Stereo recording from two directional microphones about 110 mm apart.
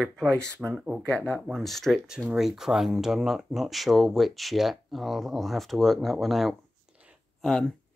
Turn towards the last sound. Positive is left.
turn(degrees=5)  # may be behind; listen again after turning